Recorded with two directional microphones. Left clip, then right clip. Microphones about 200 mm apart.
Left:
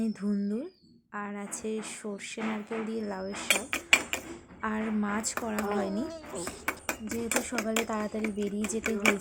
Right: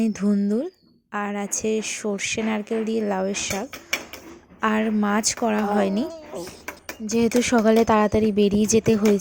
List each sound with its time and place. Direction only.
0.0 s speech: 35° right (ahead or behind)
3.7 s dishes: centre (ahead or behind)
4.6 s speech: 35° right (ahead or behind)
6.1 s speech: 15° right (ahead or behind)
7.1 s speech: 40° right (ahead or behind)